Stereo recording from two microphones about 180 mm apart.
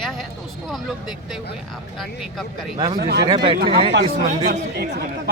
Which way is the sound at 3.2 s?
25° right (ahead or behind).